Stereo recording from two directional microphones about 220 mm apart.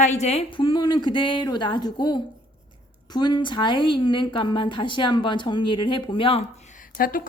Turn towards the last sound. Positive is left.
turn(degrees=40)  # may be behind; listen again after turning